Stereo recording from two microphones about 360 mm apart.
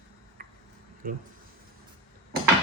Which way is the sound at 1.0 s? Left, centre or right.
Right.